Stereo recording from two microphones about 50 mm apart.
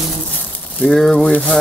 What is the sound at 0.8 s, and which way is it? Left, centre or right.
Speech, centre.